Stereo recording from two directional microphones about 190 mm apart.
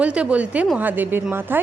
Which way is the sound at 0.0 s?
5° right (ahead or behind).